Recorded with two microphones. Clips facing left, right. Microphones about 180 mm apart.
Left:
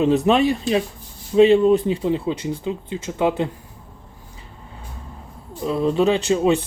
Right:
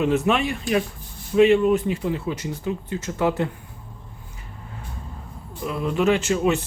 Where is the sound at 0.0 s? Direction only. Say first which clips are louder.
Left 4 dB; 35° left (ahead or behind).